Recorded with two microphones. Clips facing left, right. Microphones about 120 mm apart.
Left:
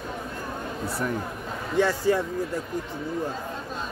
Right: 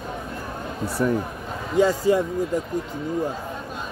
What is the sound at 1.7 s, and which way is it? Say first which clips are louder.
Speech: right 4 dB; 15° right (ahead or behind).